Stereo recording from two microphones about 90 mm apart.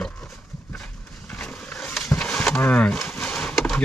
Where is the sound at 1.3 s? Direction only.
15° left (ahead or behind).